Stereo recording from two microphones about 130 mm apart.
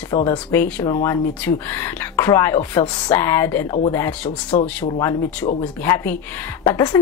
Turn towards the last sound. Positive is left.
turn(degrees=20)  # may be behind; listen again after turning